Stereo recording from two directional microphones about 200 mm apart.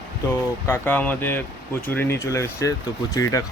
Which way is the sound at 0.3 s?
10° left (ahead or behind).